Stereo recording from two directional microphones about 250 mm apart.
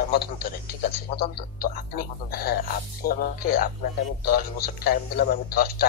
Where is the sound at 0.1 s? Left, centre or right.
Left.